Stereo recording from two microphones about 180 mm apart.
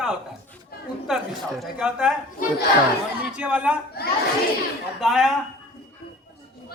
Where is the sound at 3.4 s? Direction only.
10° right (ahead or behind).